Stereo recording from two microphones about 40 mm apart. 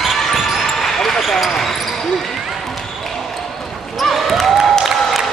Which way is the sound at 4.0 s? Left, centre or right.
Centre.